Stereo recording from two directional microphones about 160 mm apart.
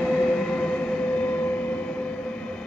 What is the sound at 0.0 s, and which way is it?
Train, 5° left (ahead or behind).